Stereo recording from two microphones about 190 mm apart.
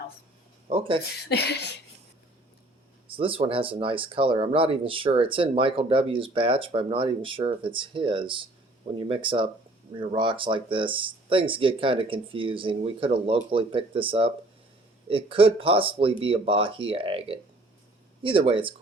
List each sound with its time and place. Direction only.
0.7 s speech: 30° right (ahead or behind)
1.2 s speech: 60° left (ahead or behind)
3.1 s speech: 30° right (ahead or behind)